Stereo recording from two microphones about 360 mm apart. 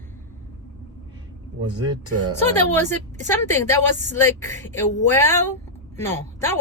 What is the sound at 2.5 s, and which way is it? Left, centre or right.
A woman's voice, centre.